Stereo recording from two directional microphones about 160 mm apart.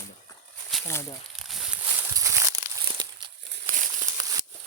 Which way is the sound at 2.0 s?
20° right (ahead or behind).